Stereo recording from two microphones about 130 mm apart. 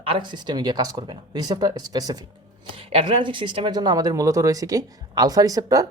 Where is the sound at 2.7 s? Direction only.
45° right (ahead or behind); by 5.9 s 25° right (ahead or behind).